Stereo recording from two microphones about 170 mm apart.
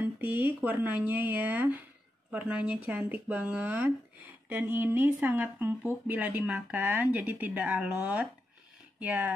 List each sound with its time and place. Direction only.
0.0 s speech: 10° right (ahead or behind)